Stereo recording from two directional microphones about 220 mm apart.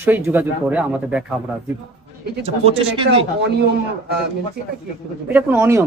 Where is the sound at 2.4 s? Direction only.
25° right (ahead or behind).